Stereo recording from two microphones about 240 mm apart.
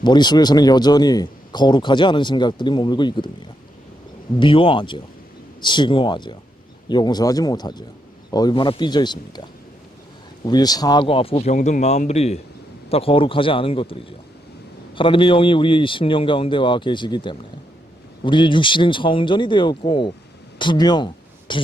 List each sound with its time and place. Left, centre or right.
0.0 s a man's voice: centre
4.4 s a man's voice: left